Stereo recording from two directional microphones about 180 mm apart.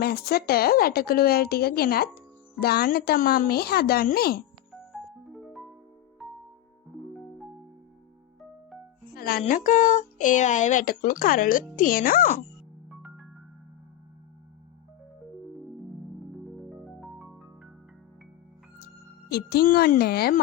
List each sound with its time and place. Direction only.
0.0 s a woman's voice: 60° left (ahead or behind)
4.9 s music: centre (ahead or behind)
9.1 s music: 60° left (ahead or behind)
9.4 s speech: 45° left (ahead or behind)
12.9 s music: 5° right (ahead or behind)
16.8 s music: centre (ahead or behind)
19.3 s a woman's voice: 60° left (ahead or behind)